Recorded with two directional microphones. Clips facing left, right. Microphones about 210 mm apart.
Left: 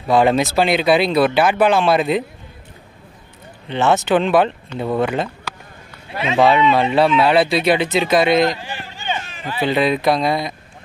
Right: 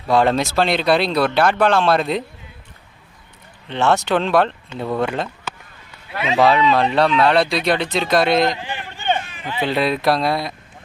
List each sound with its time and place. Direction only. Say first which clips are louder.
0.1 s speech: left 2 dB; centre (ahead or behind)
3.6 s speech: left 1 dB; 5° left (ahead or behind)
8.5 s speech: right 1 dB; 20° right (ahead or behind)
8.9 s run: right 5 dB; 55° right (ahead or behind)
9.6 s speech: left 2 dB; centre (ahead or behind)